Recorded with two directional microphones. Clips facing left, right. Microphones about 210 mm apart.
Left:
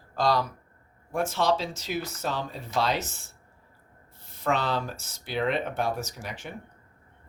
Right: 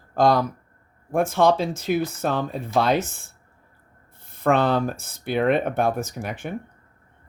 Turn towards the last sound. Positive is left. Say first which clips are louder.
# right 8 dB
turn(degrees=-55)  # may be behind; listen again after turning